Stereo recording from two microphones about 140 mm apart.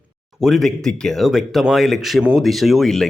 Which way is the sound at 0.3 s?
Centre (ahead or behind).